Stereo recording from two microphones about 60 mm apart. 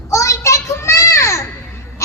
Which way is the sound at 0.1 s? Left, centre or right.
Left.